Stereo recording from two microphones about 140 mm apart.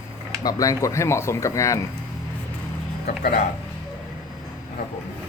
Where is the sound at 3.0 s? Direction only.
90° left.